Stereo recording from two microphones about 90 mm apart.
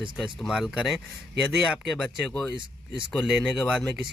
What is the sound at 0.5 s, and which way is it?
Speech, 10° right (ahead or behind).